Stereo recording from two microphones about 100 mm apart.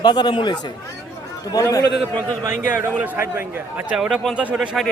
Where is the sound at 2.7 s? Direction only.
15° right (ahead or behind).